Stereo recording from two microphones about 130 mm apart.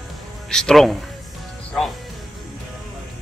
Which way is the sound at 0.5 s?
5° left (ahead or behind).